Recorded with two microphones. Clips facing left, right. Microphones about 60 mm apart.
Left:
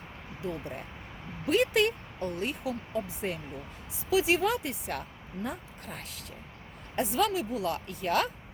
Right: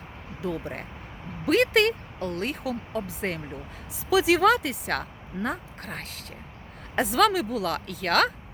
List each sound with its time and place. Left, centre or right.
0.4 s speech: right
1.5 s speech: right
4.1 s speech: right
6.9 s speech: right